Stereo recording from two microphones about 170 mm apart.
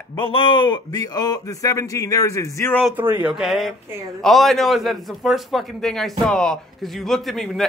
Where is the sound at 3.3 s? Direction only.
Centre (ahead or behind).